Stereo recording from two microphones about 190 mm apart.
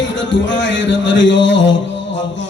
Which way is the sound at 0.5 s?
75° left (ahead or behind).